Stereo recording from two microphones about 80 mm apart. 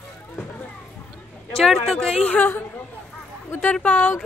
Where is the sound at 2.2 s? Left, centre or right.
Left.